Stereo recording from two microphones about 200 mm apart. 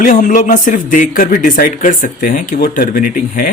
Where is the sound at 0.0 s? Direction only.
40° left (ahead or behind).